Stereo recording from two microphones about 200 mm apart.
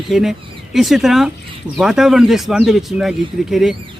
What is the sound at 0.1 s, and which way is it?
Speech, centre (ahead or behind).